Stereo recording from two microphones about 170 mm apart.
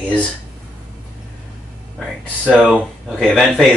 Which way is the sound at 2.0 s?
Centre (ahead or behind).